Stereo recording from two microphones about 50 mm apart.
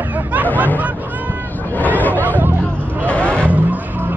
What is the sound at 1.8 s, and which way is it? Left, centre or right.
Chatter, left.